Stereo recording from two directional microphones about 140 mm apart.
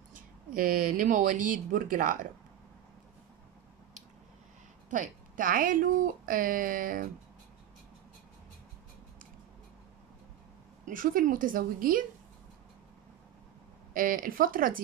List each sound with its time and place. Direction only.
0.1 s speech: 85° right; by 2.2 s 65° right (ahead or behind)
4.8 s speech: 65° right (ahead or behind); by 7.1 s 85° right
10.9 s speech: 80° right
13.9 s speech: 90° right